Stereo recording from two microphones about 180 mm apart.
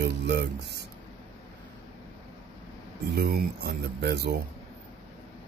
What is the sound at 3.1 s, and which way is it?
Speech, 60° right (ahead or behind).